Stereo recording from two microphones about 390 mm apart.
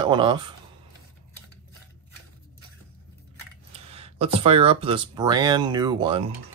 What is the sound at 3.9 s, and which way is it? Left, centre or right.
Speech, centre.